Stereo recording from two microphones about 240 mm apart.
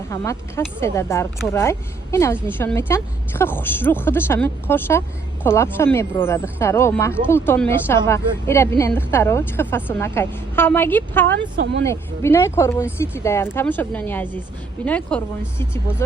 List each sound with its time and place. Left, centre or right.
0.1 s a woman's voice: centre
11.3 s speech: right
11.9 s a woman's voice: centre